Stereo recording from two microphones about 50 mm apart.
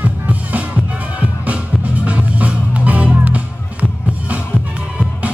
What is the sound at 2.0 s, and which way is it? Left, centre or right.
Music, right.